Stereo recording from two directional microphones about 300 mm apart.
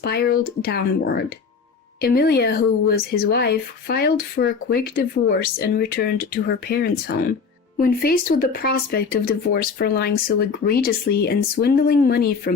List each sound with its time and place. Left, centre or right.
0.0 s speech: left